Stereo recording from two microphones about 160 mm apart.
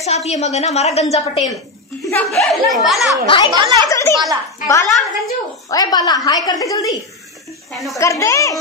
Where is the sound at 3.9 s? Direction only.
20° left (ahead or behind).